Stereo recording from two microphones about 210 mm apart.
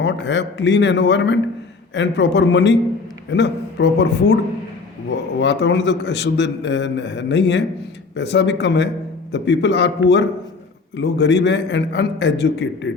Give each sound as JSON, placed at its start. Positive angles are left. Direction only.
{"t": 0.0, "sound": "a man's voice", "side_deg": 55}